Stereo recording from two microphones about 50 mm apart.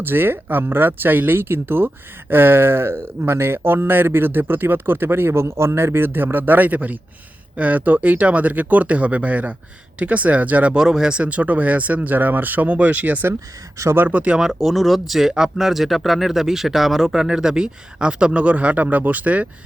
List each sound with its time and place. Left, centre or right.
0.0 s speech: right
10.8 s speech: centre; by 13.2 s right
13.8 s speech: right
14.1 s speech: right
14.3 s speech: centre; by 19.5 s right